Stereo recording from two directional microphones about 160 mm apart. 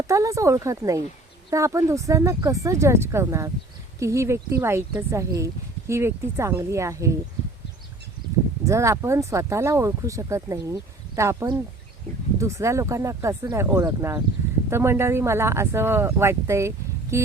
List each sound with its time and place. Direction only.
0.1 s speech: 20° right (ahead or behind)
8.6 s speech: 20° right (ahead or behind)